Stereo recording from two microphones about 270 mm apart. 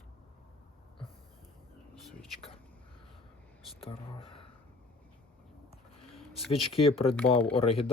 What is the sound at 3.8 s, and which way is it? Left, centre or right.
Speech, centre.